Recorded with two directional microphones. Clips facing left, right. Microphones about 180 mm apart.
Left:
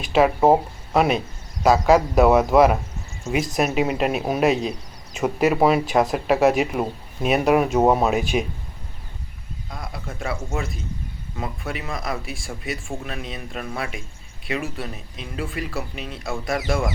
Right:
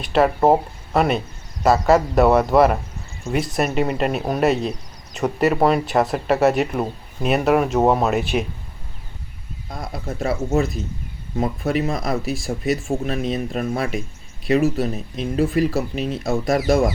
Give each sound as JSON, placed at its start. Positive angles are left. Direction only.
{"t": 0.0, "sound": "speech", "side_deg": 0}
{"t": 9.9, "sound": "speech", "side_deg": -40}